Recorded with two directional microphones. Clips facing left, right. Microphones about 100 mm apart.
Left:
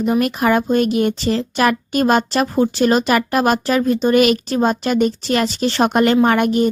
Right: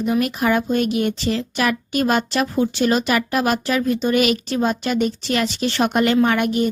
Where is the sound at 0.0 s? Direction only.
45° left (ahead or behind).